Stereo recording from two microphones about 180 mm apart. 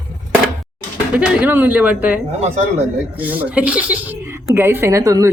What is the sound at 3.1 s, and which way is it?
Speech, 10° right (ahead or behind).